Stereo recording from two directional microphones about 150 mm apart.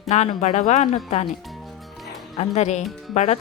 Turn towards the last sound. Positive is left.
turn(degrees=50)  # may be behind; listen again after turning